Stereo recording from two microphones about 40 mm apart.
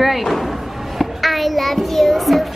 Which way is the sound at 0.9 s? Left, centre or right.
Centre.